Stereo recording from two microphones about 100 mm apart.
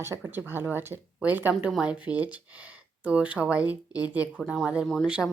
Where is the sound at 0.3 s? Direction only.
20° right (ahead or behind).